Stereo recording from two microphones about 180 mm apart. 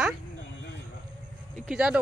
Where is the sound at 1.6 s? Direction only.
5° right (ahead or behind).